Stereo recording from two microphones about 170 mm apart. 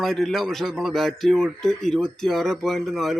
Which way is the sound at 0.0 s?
Centre (ahead or behind).